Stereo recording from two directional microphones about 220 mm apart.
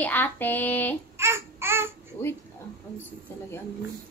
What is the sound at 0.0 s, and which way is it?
Speech, 10° left (ahead or behind).